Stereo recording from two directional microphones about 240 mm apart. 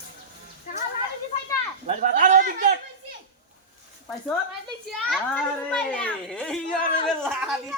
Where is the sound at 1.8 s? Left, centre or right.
Right.